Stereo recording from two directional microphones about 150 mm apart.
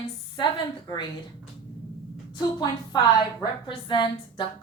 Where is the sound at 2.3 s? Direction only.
30° left (ahead or behind).